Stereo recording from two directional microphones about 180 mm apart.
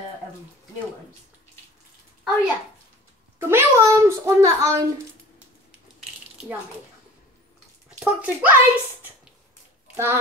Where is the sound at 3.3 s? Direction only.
15° right (ahead or behind).